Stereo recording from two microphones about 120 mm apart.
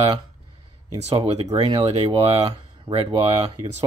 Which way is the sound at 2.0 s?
50° right (ahead or behind).